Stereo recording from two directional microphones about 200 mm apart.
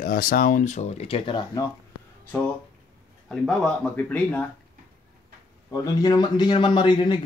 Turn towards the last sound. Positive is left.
turn(degrees=25)  # may be behind; listen again after turning